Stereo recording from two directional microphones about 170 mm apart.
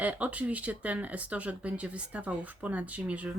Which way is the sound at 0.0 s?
10° right (ahead or behind).